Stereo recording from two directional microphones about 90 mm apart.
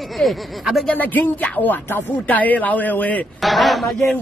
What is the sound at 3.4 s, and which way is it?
Speech, centre (ahead or behind).